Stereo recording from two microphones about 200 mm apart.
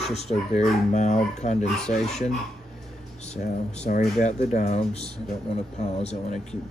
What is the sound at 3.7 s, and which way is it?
Speech, 35° left (ahead or behind).